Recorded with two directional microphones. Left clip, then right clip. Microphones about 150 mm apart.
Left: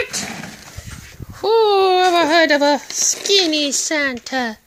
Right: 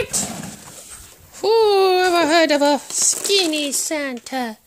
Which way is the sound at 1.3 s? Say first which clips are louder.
Left 1 dB; 25° right (ahead or behind).